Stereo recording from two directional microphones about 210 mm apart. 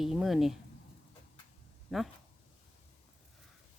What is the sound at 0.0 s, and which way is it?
Speech, centre (ahead or behind).